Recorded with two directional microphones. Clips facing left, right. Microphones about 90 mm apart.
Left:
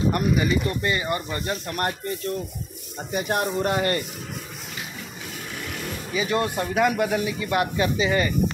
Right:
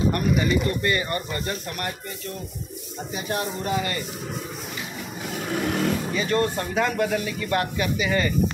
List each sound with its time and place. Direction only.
0.1 s speech: 20° left (ahead or behind)
3.1 s speech: 55° left (ahead or behind)
5.5 s vehicle: 60° right (ahead or behind)
6.1 s speech: 15° left (ahead or behind)